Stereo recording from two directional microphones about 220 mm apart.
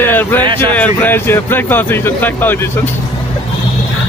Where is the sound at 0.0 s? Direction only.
10° left (ahead or behind).